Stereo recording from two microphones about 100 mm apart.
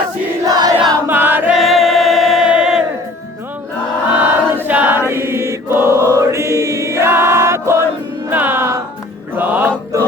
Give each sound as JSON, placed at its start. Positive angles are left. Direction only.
{"t": 0.4, "sound": "choir", "side_deg": -40}
{"t": 1.0, "sound": "choir", "side_deg": -20}
{"t": 1.5, "sound": "choir", "side_deg": 0}
{"t": 4.1, "sound": "choir", "side_deg": -15}
{"t": 8.3, "sound": "music", "side_deg": -20}